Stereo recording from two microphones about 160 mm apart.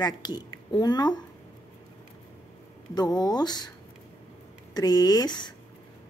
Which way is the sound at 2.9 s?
25° left (ahead or behind).